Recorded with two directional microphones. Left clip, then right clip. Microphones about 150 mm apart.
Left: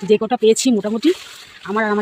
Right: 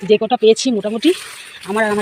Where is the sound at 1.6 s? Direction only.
10° left (ahead or behind).